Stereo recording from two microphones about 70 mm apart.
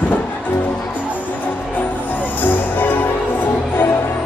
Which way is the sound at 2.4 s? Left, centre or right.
Left.